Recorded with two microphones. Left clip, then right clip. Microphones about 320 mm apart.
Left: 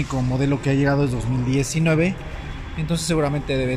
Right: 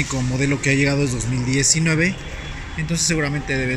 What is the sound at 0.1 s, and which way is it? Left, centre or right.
Speech, centre.